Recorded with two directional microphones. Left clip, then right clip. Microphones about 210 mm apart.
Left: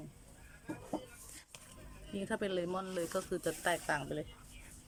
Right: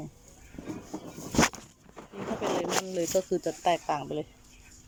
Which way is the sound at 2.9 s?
10° right (ahead or behind).